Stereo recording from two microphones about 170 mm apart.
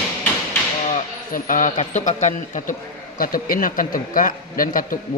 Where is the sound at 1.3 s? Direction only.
50° left (ahead or behind).